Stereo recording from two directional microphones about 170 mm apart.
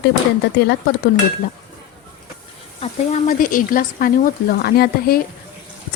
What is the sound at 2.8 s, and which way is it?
Speech, 45° left (ahead or behind).